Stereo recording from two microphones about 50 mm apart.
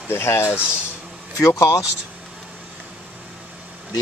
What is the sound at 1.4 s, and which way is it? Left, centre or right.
Speech, left.